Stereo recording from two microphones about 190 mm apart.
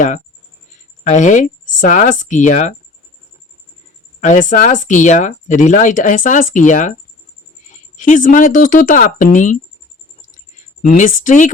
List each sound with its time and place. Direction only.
1.0 s speech: 40° left (ahead or behind)
4.2 s speech: 40° left (ahead or behind)
10.9 s speech: 40° left (ahead or behind)